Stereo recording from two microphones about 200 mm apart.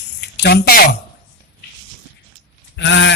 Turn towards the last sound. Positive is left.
turn(degrees=65)  # may be behind; listen again after turning